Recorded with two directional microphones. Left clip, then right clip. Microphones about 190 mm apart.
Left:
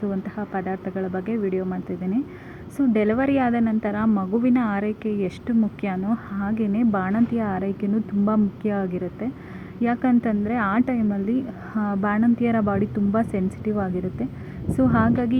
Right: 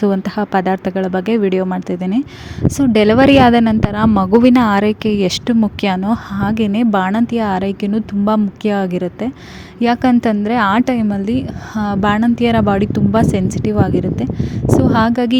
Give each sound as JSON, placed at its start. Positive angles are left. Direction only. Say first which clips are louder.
{"t": 0.0, "sound": "a woman's voice", "louder": "right 12 dB", "side_deg": -75}
{"t": 11.7, "sound": "a woman's voice", "louder": "right 9 dB", "side_deg": -45}